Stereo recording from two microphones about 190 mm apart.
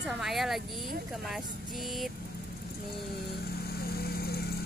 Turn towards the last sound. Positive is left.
turn(degrees=55)  # may be behind; listen again after turning